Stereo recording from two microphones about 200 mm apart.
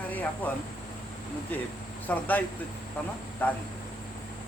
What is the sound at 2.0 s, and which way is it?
Speech, 10° left (ahead or behind).